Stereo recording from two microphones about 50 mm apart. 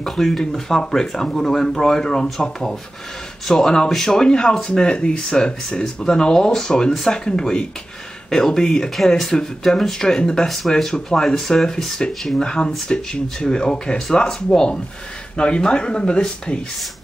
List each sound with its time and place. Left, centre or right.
0.0 s speech: centre